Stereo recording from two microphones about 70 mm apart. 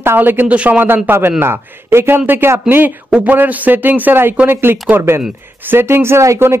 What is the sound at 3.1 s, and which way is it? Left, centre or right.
Speech, centre.